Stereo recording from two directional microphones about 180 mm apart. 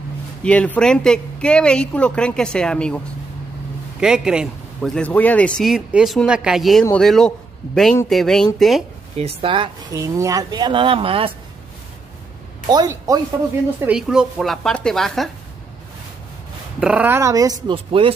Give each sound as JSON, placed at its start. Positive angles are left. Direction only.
{"t": 0.4, "sound": "speech", "side_deg": 5}
{"t": 4.0, "sound": "speech", "side_deg": -5}
{"t": 9.1, "sound": "speech", "side_deg": -30}
{"t": 9.9, "sound": "speech", "side_deg": -15}
{"t": 12.6, "sound": "speech", "side_deg": -20}
{"t": 13.7, "sound": "speech", "side_deg": -5}
{"t": 16.8, "sound": "speech", "side_deg": -10}
{"t": 17.6, "sound": "speech", "side_deg": -30}